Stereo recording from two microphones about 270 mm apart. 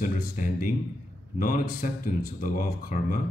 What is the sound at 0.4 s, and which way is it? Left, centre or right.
Speech, left.